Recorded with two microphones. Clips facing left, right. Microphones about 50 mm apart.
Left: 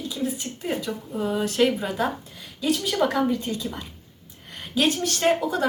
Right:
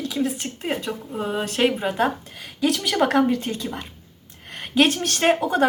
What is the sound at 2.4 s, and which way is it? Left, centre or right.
Speech, right.